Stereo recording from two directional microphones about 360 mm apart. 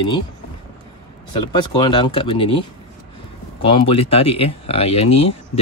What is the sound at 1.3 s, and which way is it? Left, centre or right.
Speech, centre.